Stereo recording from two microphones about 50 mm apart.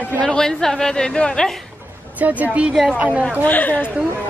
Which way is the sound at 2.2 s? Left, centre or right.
Right.